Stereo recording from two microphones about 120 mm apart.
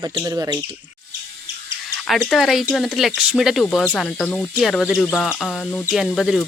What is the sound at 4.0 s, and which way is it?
Speech, 10° left (ahead or behind).